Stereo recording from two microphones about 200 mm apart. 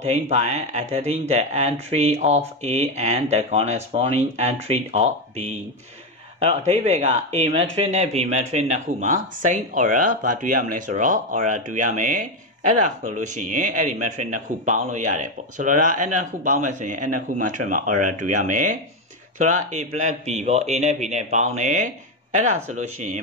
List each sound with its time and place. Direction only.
0.0 s speech: 35° right (ahead or behind)